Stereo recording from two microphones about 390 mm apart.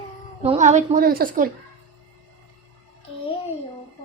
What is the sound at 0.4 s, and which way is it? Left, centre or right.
A woman's voice, centre.